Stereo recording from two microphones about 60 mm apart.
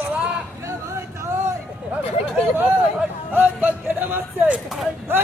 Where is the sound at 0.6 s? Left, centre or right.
Right.